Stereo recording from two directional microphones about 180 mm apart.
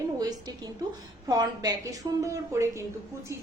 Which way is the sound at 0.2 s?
20° right (ahead or behind).